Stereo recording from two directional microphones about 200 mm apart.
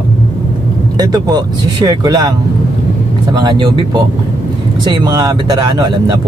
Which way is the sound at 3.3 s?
20° right (ahead or behind).